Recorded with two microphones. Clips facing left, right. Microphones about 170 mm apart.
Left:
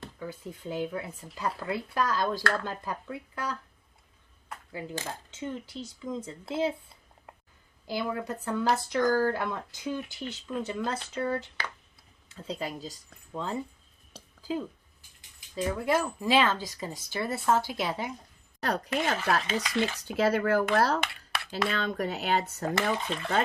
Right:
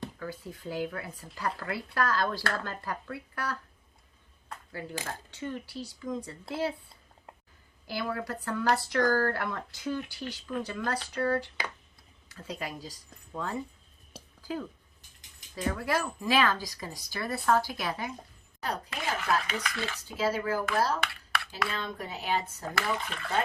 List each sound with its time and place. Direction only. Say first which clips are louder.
0.2 s speech: left 1 dB; 20° left (ahead or behind)
4.7 s speech: left 1 dB; 20° left (ahead or behind)
7.9 s speech: left 2 dB; 20° left (ahead or behind)
15.5 s speech: left 3 dB; 20° left (ahead or behind)
18.6 s speech: left 5 dB; 70° left (ahead or behind)
19.5 s speech: left 6 dB; 25° left (ahead or behind)
20.1 s speech: left 3 dB; 65° left (ahead or behind)
23.0 s speech: left 6 dB; 25° left (ahead or behind)